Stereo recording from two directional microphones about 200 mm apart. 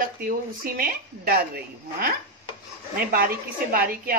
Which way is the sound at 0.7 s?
50° right (ahead or behind).